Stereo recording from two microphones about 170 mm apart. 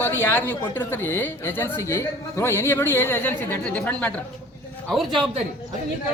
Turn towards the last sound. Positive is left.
turn(degrees=0)  # may be behind; listen again after turning